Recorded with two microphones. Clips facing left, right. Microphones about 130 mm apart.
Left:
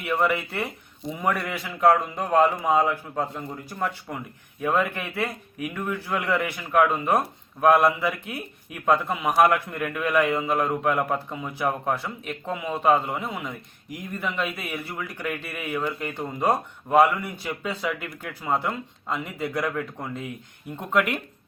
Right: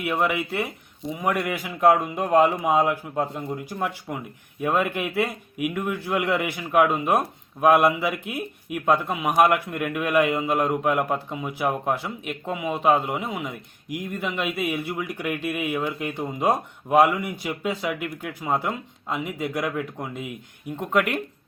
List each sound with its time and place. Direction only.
0.0 s a man's voice: 10° right (ahead or behind)
14.6 s a man's voice: 15° right (ahead or behind)